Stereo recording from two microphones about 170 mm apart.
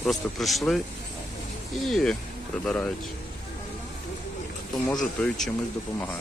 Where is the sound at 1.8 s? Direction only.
Centre (ahead or behind).